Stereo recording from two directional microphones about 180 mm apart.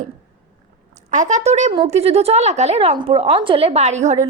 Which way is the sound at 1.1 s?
45° right (ahead or behind).